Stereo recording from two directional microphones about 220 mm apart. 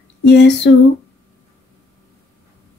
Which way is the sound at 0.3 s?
50° left (ahead or behind).